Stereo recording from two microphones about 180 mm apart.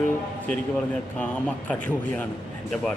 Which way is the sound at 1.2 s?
10° left (ahead or behind).